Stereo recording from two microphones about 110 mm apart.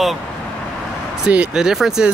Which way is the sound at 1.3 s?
10° right (ahead or behind).